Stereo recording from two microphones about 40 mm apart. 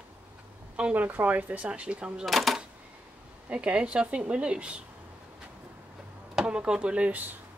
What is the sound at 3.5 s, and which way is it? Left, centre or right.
Speech, right.